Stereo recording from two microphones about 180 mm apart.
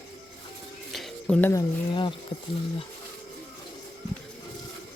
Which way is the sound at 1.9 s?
25° left (ahead or behind).